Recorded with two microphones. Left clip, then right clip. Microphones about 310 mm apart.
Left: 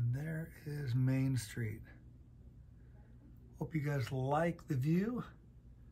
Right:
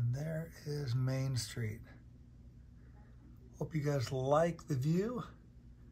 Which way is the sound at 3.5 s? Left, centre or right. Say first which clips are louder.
Right 3 dB; centre.